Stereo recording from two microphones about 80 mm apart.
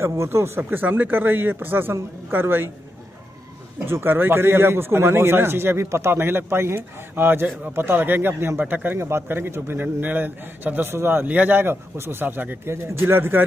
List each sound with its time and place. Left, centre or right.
0.0 s speech: right
3.8 s speech: right